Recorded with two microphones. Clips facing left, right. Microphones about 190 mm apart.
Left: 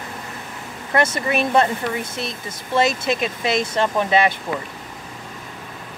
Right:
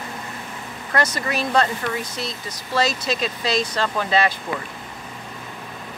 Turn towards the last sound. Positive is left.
turn(degrees=20)  # may be behind; listen again after turning